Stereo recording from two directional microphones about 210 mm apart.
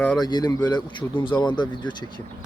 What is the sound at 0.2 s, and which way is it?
Speech, 20° left (ahead or behind).